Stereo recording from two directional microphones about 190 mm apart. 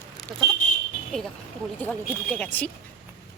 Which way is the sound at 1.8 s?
5° left (ahead or behind).